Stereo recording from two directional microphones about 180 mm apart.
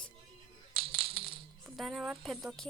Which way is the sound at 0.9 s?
30° right (ahead or behind).